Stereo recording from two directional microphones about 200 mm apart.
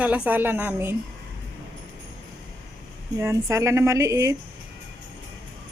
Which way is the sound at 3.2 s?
15° right (ahead or behind).